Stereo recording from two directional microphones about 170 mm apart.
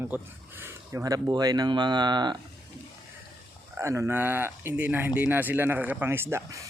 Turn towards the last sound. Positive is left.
turn(degrees=-15)  # may be behind; listen again after turning